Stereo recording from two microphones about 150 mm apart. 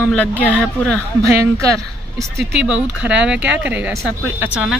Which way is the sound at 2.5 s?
5° right (ahead or behind).